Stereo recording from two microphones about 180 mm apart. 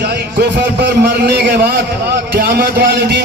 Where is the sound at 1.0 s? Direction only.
65° right (ahead or behind).